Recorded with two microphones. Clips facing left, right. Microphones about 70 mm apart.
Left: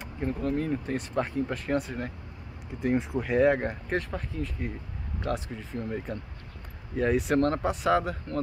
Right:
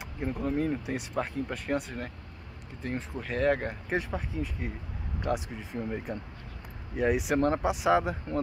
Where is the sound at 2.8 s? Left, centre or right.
Centre.